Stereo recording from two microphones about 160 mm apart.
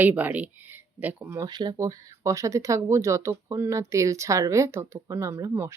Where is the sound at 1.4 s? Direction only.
25° right (ahead or behind).